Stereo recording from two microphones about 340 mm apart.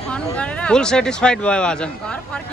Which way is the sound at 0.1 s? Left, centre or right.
Centre.